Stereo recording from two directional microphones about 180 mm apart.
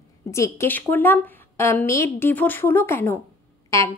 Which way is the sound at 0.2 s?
15° left (ahead or behind).